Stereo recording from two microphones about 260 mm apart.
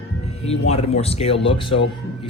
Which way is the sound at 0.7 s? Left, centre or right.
Left.